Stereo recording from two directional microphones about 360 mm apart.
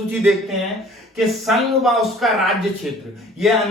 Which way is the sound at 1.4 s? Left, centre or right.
Centre.